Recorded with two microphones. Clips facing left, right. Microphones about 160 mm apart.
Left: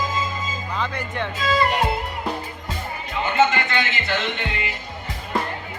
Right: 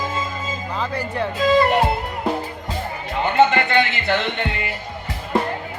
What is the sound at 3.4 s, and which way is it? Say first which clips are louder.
Music: right 4 dB; 60° right (ahead or behind).